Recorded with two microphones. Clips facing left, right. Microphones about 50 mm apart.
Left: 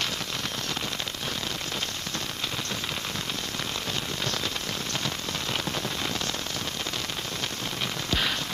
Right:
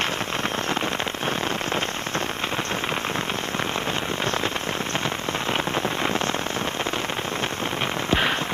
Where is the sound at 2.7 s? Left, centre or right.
Right.